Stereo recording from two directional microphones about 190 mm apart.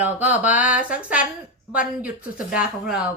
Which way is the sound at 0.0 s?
10° right (ahead or behind).